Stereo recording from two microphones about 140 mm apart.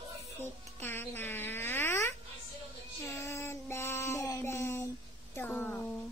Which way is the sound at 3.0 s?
20° left (ahead or behind).